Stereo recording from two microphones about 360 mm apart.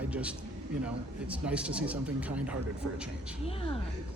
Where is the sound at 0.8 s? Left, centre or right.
Centre.